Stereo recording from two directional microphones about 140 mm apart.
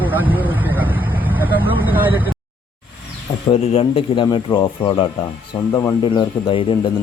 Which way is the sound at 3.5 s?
45° left (ahead or behind).